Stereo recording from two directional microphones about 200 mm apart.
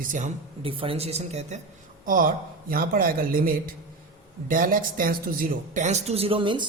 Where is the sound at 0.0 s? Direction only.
40° right (ahead or behind).